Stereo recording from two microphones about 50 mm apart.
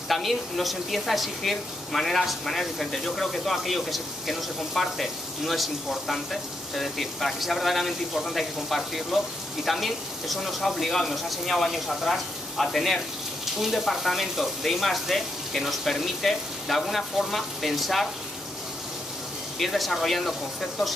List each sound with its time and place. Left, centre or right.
0.1 s a woman's voice: centre
19.6 s a woman's voice: centre